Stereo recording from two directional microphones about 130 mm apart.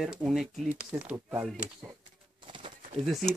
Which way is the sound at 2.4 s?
40° right (ahead or behind).